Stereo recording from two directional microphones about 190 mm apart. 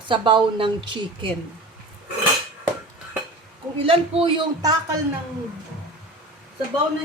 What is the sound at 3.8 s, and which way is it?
Speech, 30° right (ahead or behind).